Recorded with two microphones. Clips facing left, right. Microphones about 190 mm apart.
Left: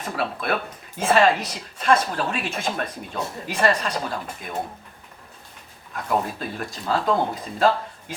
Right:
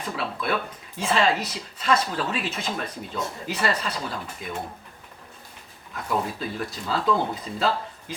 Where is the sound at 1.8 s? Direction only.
50° left (ahead or behind).